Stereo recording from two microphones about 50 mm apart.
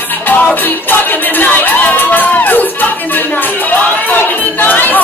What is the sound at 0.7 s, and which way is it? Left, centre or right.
Crowd, left.